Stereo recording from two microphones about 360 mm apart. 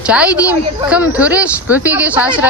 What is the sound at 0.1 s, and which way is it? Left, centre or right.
Speech, centre.